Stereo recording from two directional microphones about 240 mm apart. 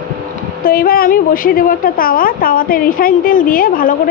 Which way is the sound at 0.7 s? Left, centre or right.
Left.